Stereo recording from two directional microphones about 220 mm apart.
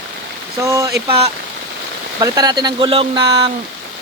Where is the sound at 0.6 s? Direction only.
15° right (ahead or behind).